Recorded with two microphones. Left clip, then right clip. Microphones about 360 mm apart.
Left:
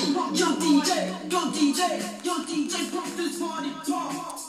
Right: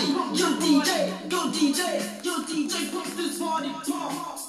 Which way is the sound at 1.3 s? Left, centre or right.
Centre.